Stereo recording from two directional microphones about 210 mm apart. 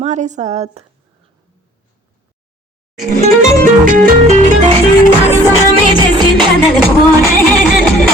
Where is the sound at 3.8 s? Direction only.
40° right (ahead or behind).